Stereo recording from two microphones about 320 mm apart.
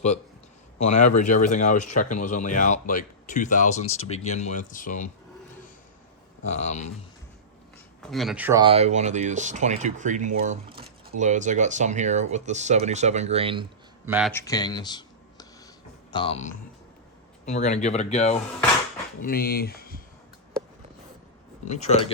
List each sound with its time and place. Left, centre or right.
0.8 s speech: left
6.6 s speech: left
8.0 s speech: centre
14.3 s speech: centre; by 20.0 s left
21.7 s speech: centre